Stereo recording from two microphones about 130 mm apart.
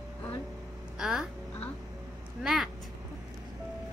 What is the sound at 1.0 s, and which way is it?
Speech, 5° right (ahead or behind).